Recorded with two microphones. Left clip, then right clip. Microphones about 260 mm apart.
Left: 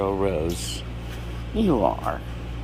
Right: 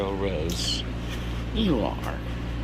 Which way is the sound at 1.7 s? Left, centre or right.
Left.